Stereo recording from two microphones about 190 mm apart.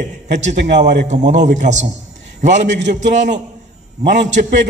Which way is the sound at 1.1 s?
40° right (ahead or behind).